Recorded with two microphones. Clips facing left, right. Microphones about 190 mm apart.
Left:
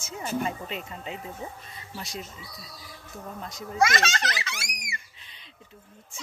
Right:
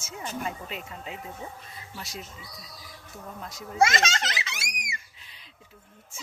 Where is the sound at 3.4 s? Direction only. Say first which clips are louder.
Left 2 dB; 5° right (ahead or behind).